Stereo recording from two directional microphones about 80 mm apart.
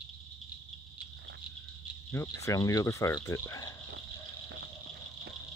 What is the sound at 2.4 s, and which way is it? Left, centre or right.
Speech, left.